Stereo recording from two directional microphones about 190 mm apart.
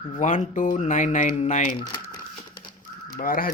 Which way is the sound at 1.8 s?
20° left (ahead or behind).